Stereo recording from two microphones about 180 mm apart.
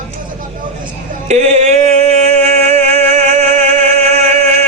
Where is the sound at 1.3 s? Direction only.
40° right (ahead or behind).